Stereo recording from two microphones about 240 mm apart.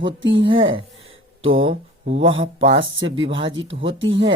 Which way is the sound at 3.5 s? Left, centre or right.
Right.